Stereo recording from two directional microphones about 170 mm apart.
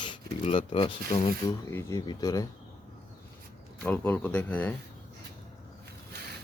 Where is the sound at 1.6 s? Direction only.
15° left (ahead or behind).